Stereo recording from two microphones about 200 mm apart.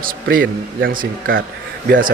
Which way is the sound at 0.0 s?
45° right (ahead or behind).